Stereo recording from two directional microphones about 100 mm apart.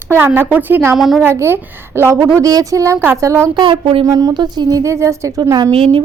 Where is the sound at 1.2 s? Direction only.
25° right (ahead or behind).